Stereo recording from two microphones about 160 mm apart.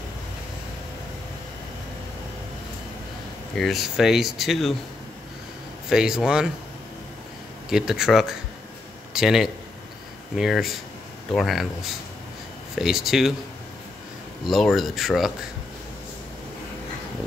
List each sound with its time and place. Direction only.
3.5 s speech: centre (ahead or behind)
5.9 s speech: 5° right (ahead or behind)
7.7 s speech: 5° right (ahead or behind)
14.4 s speech: centre (ahead or behind)